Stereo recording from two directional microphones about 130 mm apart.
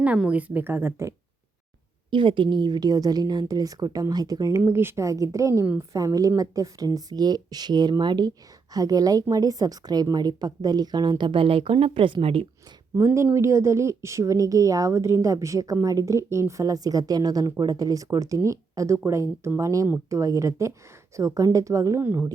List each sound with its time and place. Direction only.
0.0 s speech: 10° right (ahead or behind)
2.0 s a woman's voice: 40° right (ahead or behind)
13.0 s speech: 20° right (ahead or behind)